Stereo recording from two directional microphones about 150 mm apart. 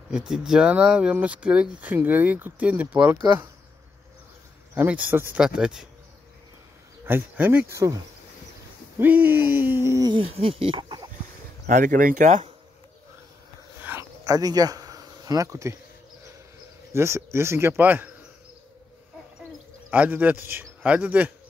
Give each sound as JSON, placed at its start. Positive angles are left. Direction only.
{"t": 0.1, "sound": "speech", "side_deg": -5}
{"t": 4.7, "sound": "speech", "side_deg": -10}
{"t": 7.1, "sound": "speech", "side_deg": -15}
{"t": 9.0, "sound": "speech", "side_deg": -15}
{"t": 10.1, "sound": "speech", "side_deg": -40}
{"t": 11.6, "sound": "speech", "side_deg": -60}
{"t": 13.7, "sound": "a sound", "side_deg": -10}
{"t": 14.2, "sound": "speech", "side_deg": -25}
{"t": 16.9, "sound": "speech", "side_deg": -20}
{"t": 19.9, "sound": "speech", "side_deg": -10}